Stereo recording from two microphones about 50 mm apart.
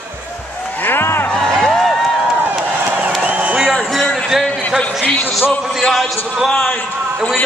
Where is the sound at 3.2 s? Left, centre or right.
Right.